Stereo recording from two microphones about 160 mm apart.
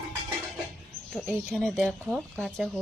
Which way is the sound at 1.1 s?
Centre (ahead or behind).